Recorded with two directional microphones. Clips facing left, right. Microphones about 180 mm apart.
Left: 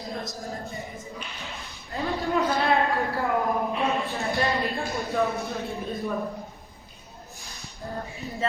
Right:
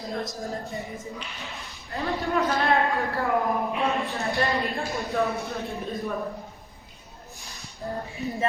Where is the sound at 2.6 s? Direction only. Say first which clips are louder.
Even; centre (ahead or behind).